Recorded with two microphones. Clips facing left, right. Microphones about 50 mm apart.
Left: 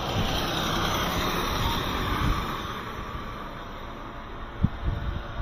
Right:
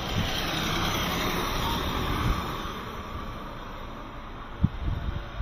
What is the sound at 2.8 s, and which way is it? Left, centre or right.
Vehicle, left.